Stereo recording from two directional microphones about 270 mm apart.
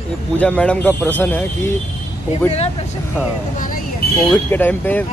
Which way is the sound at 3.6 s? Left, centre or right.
Left.